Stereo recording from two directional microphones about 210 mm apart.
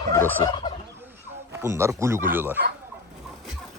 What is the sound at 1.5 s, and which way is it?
Speech, 15° right (ahead or behind).